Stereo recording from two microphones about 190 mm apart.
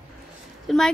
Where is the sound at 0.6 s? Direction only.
Centre (ahead or behind).